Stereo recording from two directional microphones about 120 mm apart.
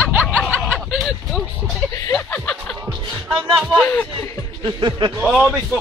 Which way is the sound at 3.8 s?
20° left (ahead or behind).